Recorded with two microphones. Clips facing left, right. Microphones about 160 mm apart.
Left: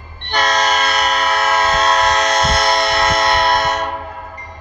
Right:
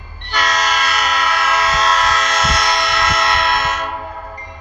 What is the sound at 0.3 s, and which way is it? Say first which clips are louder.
Train: left 3 dB; 30° left (ahead or behind).